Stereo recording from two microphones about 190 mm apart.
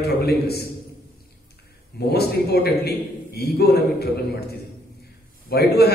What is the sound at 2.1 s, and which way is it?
A man's voice, 55° left (ahead or behind).